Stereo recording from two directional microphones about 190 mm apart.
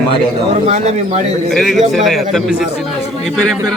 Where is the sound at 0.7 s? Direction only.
35° right (ahead or behind).